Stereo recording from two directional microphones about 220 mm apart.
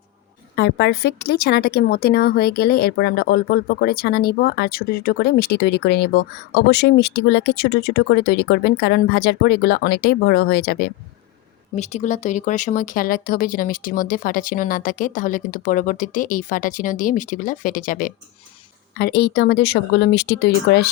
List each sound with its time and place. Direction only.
0.5 s a woman's voice: 50° left (ahead or behind)
11.8 s a woman's voice: 30° left (ahead or behind); by 20.9 s 45° left (ahead or behind)